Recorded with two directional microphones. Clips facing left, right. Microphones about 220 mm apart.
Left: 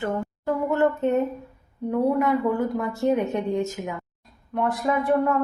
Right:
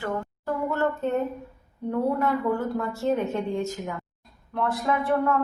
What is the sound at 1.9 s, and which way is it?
Speech, 15° left (ahead or behind).